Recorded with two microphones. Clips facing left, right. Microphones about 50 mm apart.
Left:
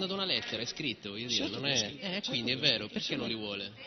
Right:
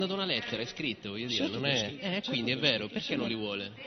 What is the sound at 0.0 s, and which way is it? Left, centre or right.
A man's voice, centre.